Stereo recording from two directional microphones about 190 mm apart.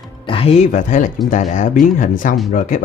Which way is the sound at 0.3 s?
30° left (ahead or behind).